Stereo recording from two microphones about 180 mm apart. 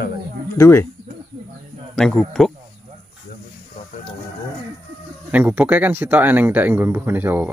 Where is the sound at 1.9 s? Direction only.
Centre (ahead or behind).